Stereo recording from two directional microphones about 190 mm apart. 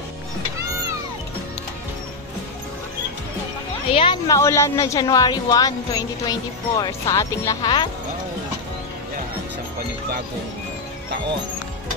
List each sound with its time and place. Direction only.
3.9 s speech: 25° left (ahead or behind)